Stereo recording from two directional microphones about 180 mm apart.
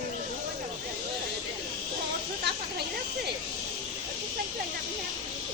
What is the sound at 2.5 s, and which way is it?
Snake, 70° right (ahead or behind).